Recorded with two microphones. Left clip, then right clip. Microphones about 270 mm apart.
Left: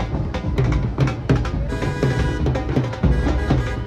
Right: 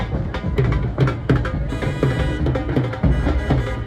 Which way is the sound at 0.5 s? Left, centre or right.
Left.